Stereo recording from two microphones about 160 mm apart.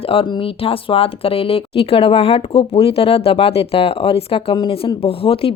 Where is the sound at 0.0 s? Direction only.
35° left (ahead or behind).